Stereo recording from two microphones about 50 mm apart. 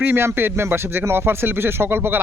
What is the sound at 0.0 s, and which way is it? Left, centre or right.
Speech, right.